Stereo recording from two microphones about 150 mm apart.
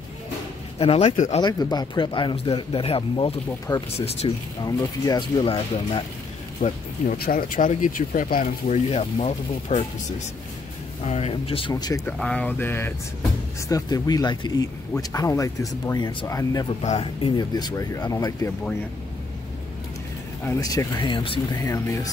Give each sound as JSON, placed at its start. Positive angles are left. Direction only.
{"t": 0.7, "sound": "speech", "side_deg": 40}
{"t": 1.4, "sound": "speech", "side_deg": 25}
{"t": 3.7, "sound": "speech", "side_deg": 25}
{"t": 6.6, "sound": "speech", "side_deg": 55}
{"t": 7.2, "sound": "speech", "side_deg": 75}
{"t": 11.1, "sound": "speech", "side_deg": 40}
{"t": 11.7, "sound": "speech", "side_deg": 25}
{"t": 12.1, "sound": "speech", "side_deg": 5}
{"t": 16.8, "sound": "speech", "side_deg": 40}
{"t": 20.4, "sound": "speech", "side_deg": 20}
{"t": 21.6, "sound": "speech", "side_deg": 20}